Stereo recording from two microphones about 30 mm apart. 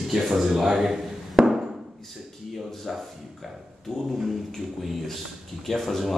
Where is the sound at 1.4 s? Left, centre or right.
Centre.